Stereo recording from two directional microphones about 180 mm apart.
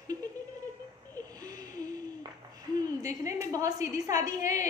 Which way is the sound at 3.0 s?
15° right (ahead or behind).